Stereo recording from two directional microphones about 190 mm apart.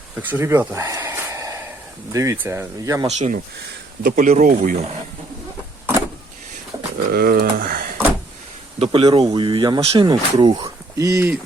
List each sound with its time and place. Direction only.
0.2 s a sound: 10° right (ahead or behind)
2.1 s speech: 15° right (ahead or behind)
3.1 s speech: 40° right (ahead or behind)
7.1 s speech: 50° right (ahead or behind)
8.8 s speech: 25° right (ahead or behind)